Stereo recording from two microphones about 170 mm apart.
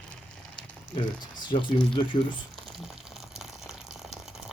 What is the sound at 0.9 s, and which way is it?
Speech, 25° left (ahead or behind).